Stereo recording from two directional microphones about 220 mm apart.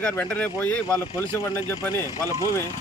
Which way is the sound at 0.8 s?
15° right (ahead or behind).